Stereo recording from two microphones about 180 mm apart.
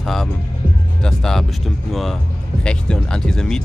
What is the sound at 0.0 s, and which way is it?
Speech, centre (ahead or behind).